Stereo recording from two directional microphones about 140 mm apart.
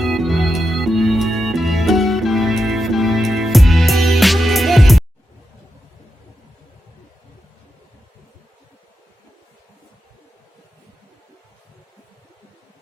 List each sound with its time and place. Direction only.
0.0 s music: centre (ahead or behind)